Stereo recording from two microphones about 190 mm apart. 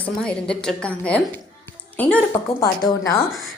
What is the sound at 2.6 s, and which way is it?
Speech, 15° left (ahead or behind).